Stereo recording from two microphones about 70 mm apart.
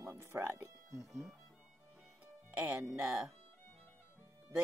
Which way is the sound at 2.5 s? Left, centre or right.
Right.